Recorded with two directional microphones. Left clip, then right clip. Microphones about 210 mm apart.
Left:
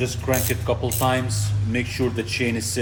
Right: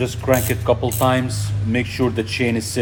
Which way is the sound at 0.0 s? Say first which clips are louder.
Right 5 dB; 45° right (ahead or behind).